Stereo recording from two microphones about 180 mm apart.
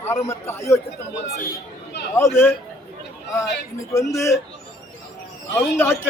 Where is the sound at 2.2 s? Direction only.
15° left (ahead or behind).